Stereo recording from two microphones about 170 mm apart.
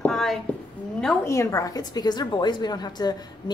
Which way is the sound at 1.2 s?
15° left (ahead or behind).